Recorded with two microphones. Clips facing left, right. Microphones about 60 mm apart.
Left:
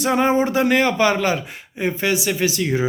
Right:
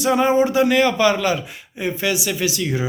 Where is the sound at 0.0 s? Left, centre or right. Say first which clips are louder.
Right 1 dB; left.